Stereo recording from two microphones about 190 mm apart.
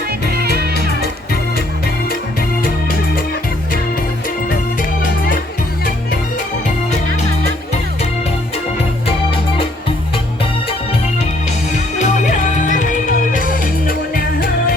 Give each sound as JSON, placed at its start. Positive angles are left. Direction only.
{"t": 0.3, "sound": "music", "side_deg": -55}
{"t": 11.9, "sound": "music", "side_deg": 40}